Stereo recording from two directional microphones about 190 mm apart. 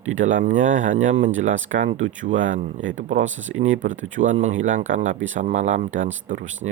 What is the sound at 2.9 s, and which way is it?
Speech, 40° right (ahead or behind).